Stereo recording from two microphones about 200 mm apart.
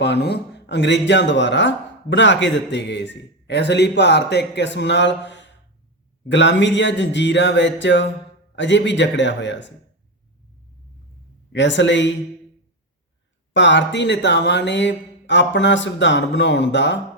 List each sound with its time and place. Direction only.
0.0 s speech: 55° left (ahead or behind)
11.5 s speech: 65° left (ahead or behind)
13.5 s speech: 65° left (ahead or behind)